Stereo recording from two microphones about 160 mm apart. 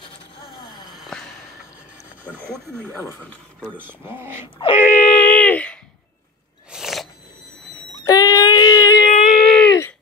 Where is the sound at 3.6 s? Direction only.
10° right (ahead or behind).